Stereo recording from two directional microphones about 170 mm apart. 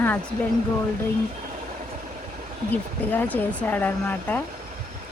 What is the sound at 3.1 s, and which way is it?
Speech, 10° left (ahead or behind).